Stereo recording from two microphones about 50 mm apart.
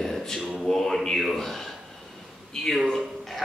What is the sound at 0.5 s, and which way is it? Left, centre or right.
A man's voice, centre.